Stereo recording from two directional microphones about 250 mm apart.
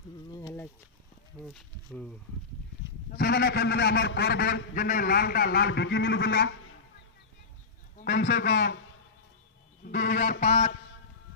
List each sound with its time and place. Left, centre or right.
0.3 s a sound: centre
1.5 s speech: centre
3.1 s a man's voice: left
8.0 s a man's voice: left
9.8 s a man's voice: left